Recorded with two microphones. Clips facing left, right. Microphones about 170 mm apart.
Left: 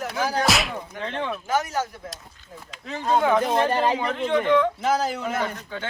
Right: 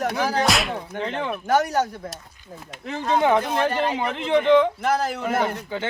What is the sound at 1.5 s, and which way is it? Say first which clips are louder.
Speech: right 6 dB; 65° right (ahead or behind).